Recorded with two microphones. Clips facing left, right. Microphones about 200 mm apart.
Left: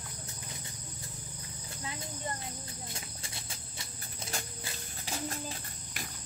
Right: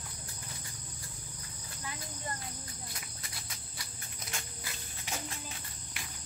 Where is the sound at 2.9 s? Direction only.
25° left (ahead or behind).